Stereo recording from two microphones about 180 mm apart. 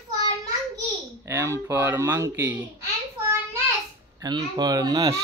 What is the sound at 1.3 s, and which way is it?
A child's voice, 15° right (ahead or behind).